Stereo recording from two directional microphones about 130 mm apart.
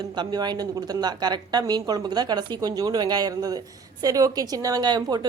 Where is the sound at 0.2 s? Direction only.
35° right (ahead or behind).